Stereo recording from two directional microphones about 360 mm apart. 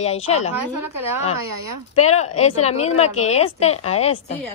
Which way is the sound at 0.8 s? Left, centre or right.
Right.